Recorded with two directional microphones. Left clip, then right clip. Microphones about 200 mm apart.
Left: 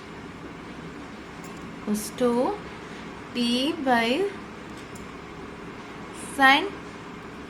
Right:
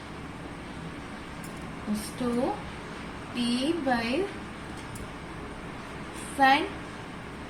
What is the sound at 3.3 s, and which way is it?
Speech, 30° left (ahead or behind).